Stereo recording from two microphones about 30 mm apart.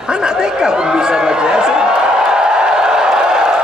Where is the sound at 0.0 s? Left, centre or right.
Right.